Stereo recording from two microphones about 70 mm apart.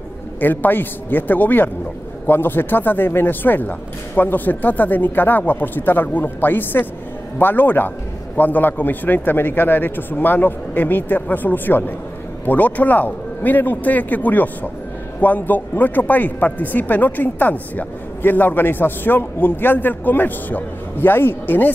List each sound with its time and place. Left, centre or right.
0.4 s speech: left